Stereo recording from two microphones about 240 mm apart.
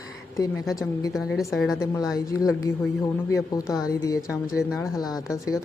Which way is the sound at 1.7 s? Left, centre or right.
Centre.